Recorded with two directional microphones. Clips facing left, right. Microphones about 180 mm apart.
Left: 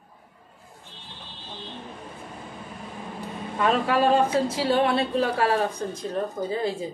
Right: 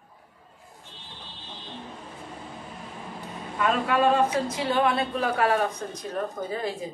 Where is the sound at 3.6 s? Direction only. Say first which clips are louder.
Left 1 dB; 30° left (ahead or behind).